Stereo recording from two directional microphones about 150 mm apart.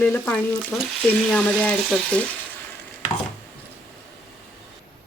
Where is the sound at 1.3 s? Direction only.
10° left (ahead or behind).